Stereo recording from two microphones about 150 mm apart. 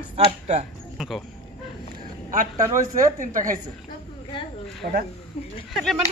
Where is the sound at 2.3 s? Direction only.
55° right (ahead or behind).